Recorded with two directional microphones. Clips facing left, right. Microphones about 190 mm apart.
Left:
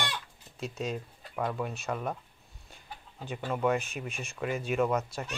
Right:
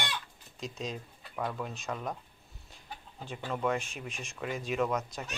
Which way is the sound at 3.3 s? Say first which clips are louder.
Left 3 dB; 5° left (ahead or behind).